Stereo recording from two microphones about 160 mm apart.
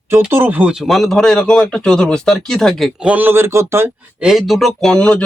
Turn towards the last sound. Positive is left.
turn(degrees=5)  # may be behind; listen again after turning